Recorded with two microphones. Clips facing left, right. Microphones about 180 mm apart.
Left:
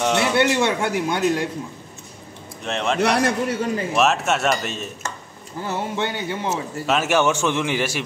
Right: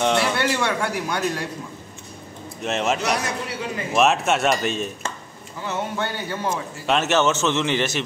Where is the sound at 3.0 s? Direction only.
55° left (ahead or behind).